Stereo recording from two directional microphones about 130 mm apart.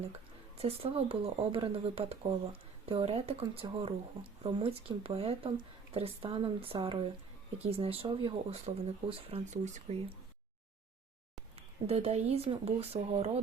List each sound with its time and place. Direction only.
0.0 s speech: 50° right (ahead or behind)
11.5 s speech: 50° right (ahead or behind)